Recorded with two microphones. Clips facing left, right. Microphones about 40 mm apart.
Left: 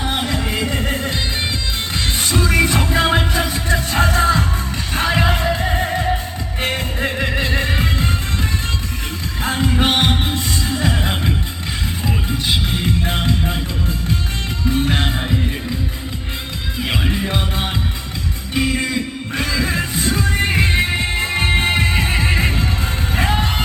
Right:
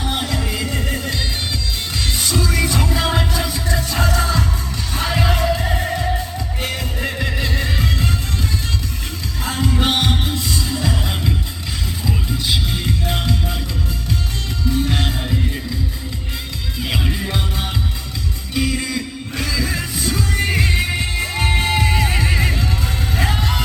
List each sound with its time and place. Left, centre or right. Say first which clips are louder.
0.0 s music: left 2 dB; left
9.4 s music: left 2 dB; left
14.7 s music: left 2 dB; left
16.9 s music: left 2 dB; left